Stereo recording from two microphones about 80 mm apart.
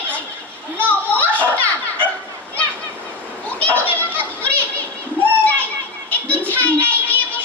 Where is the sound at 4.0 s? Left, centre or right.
Right.